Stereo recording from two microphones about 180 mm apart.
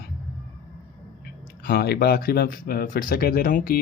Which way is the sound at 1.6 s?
55° left (ahead or behind).